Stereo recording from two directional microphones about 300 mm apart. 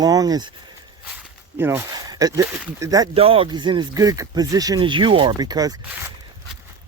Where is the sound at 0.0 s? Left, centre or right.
Centre.